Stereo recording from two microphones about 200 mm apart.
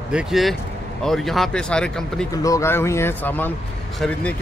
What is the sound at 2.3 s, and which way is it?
Speech, 15° left (ahead or behind).